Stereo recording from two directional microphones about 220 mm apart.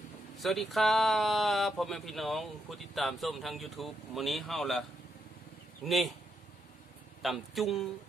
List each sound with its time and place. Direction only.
0.4 s speech: centre (ahead or behind)
5.9 s speech: centre (ahead or behind)
7.2 s speech: centre (ahead or behind)